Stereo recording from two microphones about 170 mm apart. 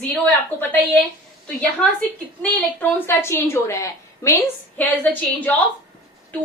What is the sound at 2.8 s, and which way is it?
A woman's voice, 10° left (ahead or behind).